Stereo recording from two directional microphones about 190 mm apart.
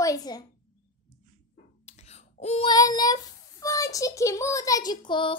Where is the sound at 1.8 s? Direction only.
35° left (ahead or behind).